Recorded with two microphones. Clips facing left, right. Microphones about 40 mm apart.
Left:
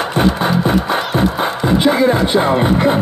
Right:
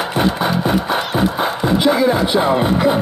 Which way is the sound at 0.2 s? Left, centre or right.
Centre.